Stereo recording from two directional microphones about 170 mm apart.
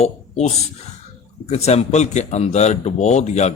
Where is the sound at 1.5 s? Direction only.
40° left (ahead or behind).